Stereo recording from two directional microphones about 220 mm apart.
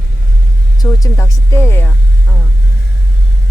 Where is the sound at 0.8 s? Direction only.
15° left (ahead or behind).